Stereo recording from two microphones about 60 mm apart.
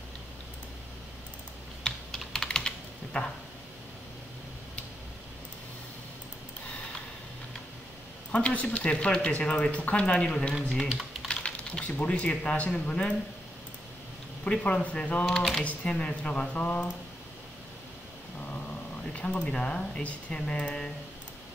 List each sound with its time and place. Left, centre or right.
1.8 s typing: centre
8.3 s speech: left
10.5 s speech: centre
11.2 s speech: centre
14.4 s speech: left
15.2 s speech: centre
15.6 s speech: left
19.1 s speech: left